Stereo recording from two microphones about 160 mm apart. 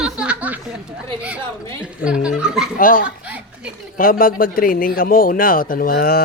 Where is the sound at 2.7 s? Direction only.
55° left (ahead or behind).